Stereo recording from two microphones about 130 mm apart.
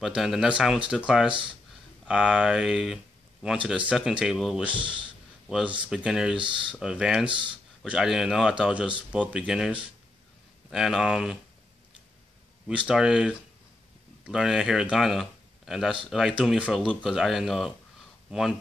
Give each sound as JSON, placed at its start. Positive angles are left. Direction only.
{"t": 0.0, "sound": "a man's voice", "side_deg": 0}
{"t": 4.7, "sound": "speech", "side_deg": -40}
{"t": 5.9, "sound": "a man's voice", "side_deg": -5}
{"t": 7.2, "sound": "speech", "side_deg": -40}
{"t": 7.8, "sound": "a man's voice", "side_deg": -5}
{"t": 12.6, "sound": "a man's voice", "side_deg": -5}